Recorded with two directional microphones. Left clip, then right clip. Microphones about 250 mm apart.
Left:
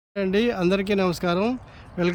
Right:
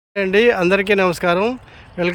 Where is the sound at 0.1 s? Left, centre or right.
Centre.